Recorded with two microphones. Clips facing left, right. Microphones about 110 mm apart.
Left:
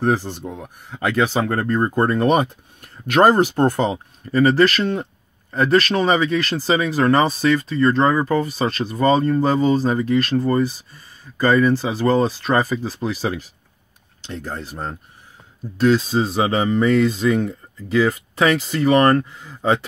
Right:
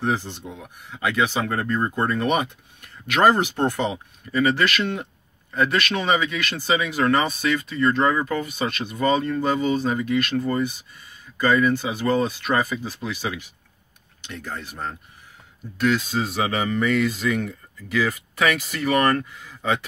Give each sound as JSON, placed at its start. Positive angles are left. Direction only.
{"t": 0.0, "sound": "speech", "side_deg": 40}